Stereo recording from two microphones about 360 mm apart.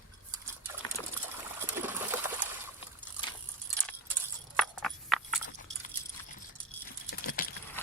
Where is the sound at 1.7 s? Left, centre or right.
Centre.